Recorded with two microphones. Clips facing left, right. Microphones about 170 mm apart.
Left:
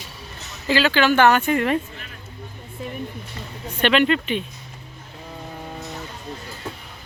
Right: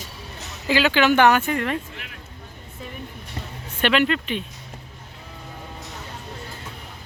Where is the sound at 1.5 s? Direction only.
5° left (ahead or behind).